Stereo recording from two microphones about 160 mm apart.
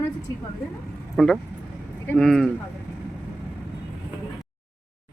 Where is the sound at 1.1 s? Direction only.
Centre (ahead or behind).